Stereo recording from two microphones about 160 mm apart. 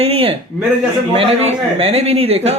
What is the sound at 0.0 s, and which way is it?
Speech, 35° right (ahead or behind).